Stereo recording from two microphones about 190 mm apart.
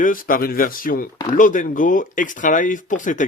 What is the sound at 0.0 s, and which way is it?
Speech, 45° left (ahead or behind).